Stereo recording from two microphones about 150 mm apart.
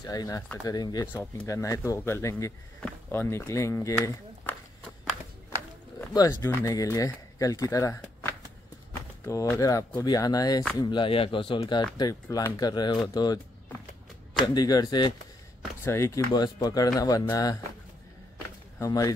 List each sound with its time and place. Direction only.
0.0 s speech: 25° left (ahead or behind)
1.0 s speech: 10° left (ahead or behind)
6.1 s speech: 20° left (ahead or behind)
12.0 s speech: 25° left (ahead or behind)
14.4 s speech: 25° left (ahead or behind)
15.8 s speech: 15° left (ahead or behind)
16.3 s speech: 25° left (ahead or behind)
18.8 s speech: 25° left (ahead or behind)